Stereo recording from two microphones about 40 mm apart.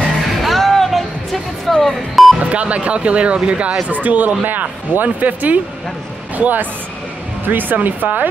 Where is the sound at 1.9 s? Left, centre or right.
Centre.